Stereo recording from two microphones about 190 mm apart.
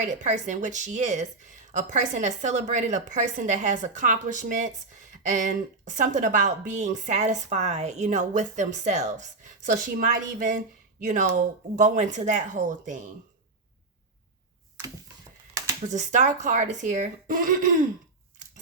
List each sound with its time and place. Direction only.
0.0 s speech: 40° right (ahead or behind)
15.9 s speech: 40° right (ahead or behind)